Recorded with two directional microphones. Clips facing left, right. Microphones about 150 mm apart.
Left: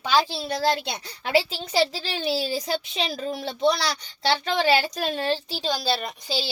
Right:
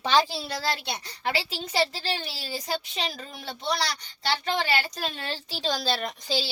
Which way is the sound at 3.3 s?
80° left.